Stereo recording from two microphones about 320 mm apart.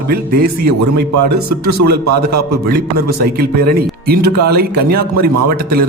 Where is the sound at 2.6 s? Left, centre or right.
Right.